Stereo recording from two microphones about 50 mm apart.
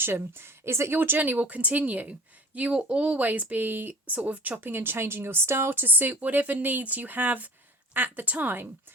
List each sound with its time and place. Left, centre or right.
0.0 s a woman's voice: right
0.9 s speech: right
3.2 s speech: right
4.1 s speech: right
4.7 s speech: right